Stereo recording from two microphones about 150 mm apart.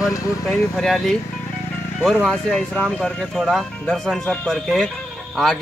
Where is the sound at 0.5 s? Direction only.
Centre (ahead or behind).